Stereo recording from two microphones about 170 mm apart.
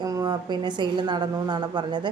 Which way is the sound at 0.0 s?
25° right (ahead or behind).